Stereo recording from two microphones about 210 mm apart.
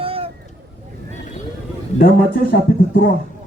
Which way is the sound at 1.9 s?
45° left (ahead or behind).